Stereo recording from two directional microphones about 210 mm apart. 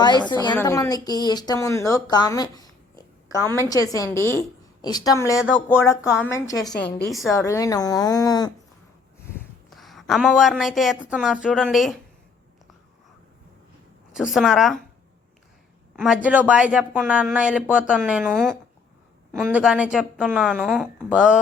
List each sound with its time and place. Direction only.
0.3 s a woman's voice: 20° left (ahead or behind)
6.6 s speech: 5° left (ahead or behind)
7.4 s speech: 15° left (ahead or behind)
9.4 s a woman's voice: centre (ahead or behind)
14.1 s speech: centre (ahead or behind)
16.0 s speech: 5° right (ahead or behind)